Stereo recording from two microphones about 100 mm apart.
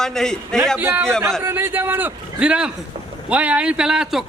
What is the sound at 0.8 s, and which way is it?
A man's voice, 20° right (ahead or behind).